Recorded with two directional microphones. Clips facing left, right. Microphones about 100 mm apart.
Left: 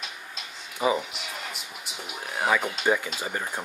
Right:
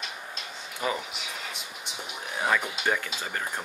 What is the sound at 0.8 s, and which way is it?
Speech, 15° left (ahead or behind).